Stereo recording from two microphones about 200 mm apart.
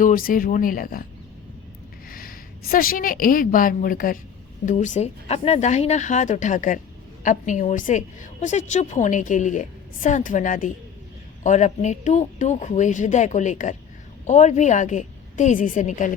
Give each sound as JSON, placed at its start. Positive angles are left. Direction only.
{"t": 0.0, "sound": "speech", "side_deg": 45}
{"t": 2.0, "sound": "a woman's voice", "side_deg": 45}